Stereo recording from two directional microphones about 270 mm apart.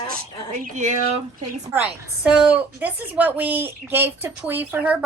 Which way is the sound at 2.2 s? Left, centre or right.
Centre.